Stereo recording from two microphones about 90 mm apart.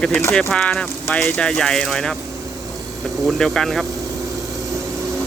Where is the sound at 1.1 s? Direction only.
20° left (ahead or behind).